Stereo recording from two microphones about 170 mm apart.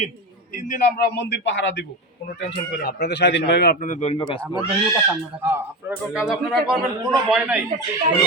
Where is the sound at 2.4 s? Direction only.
70° left (ahead or behind).